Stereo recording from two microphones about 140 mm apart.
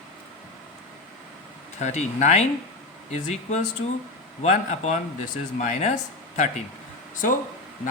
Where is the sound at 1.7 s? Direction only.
55° left (ahead or behind).